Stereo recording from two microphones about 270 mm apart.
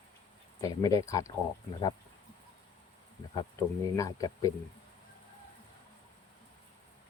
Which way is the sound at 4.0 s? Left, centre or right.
Centre.